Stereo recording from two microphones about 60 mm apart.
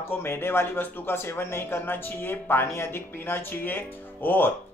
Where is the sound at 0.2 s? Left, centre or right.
Left.